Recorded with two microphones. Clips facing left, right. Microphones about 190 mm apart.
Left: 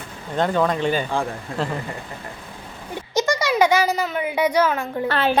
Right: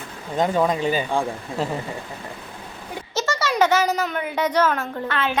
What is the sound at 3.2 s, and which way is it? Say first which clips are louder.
A woman's voice: left 2 dB; 15° left (ahead or behind).